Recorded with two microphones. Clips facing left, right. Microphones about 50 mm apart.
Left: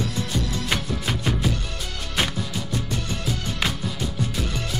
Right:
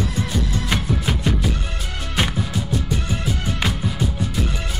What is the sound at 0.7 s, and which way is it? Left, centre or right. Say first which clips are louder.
Music: right 4 dB; centre.